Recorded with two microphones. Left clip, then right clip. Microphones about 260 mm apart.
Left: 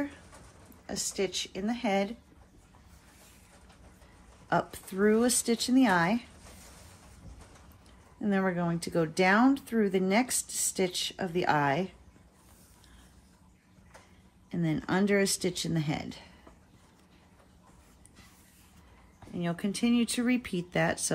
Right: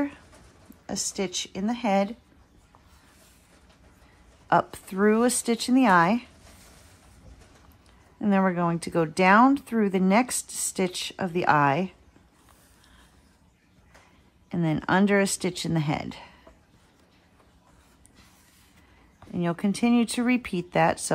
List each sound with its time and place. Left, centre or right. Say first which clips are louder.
0.8 s speech: right 2 dB; right
4.5 s speech: right 7 dB; right
8.2 s speech: right 6 dB; right
14.5 s speech: right 7 dB; right
19.4 s speech: right 5 dB; right